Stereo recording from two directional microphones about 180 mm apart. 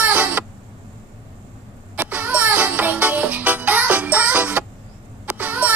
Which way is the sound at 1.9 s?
10° right (ahead or behind).